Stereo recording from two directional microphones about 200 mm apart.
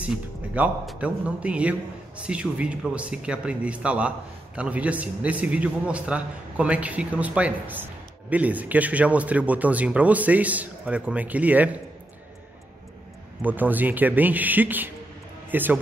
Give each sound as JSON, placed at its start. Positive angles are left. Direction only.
{"t": 0.0, "sound": "a man's voice", "side_deg": -5}
{"t": 13.4, "sound": "a man's voice", "side_deg": -10}